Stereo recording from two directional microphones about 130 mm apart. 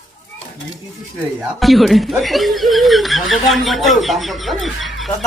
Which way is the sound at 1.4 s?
Centre (ahead or behind).